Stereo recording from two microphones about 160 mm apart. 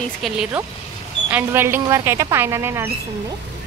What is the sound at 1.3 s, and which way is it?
Speech, 15° right (ahead or behind).